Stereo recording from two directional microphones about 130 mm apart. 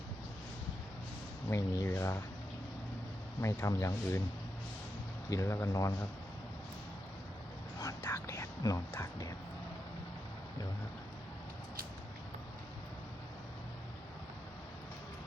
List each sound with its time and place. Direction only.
1.5 s speech: 20° left (ahead or behind)
3.4 s speech: 20° left (ahead or behind)
5.3 s speech: 20° left (ahead or behind)
7.8 s whispering: 20° left (ahead or behind)